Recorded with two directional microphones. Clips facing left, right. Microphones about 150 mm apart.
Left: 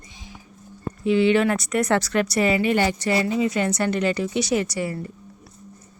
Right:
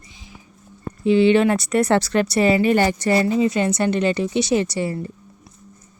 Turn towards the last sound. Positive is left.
turn(degrees=-30)  # may be behind; listen again after turning